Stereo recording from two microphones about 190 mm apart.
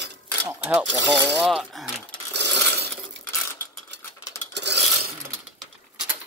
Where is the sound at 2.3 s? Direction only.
60° right (ahead or behind).